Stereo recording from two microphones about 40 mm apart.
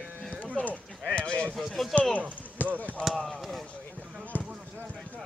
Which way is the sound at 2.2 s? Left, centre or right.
Right.